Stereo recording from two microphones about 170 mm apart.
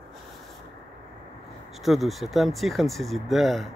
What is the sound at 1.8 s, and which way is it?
Speech, centre (ahead or behind).